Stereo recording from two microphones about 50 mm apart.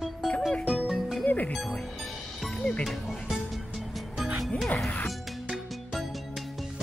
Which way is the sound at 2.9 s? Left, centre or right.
Centre.